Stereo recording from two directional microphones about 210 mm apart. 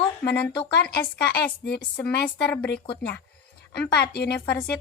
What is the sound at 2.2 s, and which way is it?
Speech, 5° left (ahead or behind).